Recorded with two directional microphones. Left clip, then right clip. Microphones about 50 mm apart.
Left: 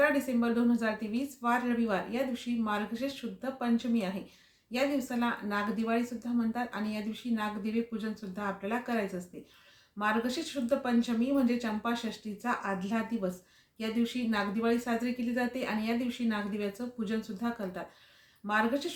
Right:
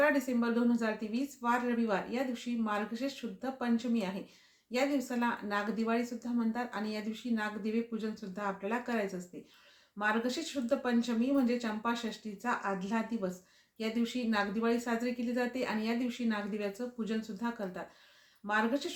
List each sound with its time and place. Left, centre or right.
0.0 s speech: right